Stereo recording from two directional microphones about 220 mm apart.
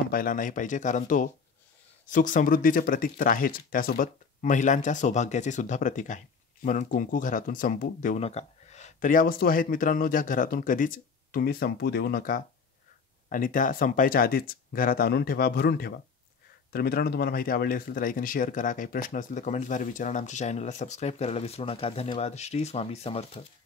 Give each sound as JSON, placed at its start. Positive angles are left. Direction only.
{"t": 0.1, "sound": "speech", "side_deg": 40}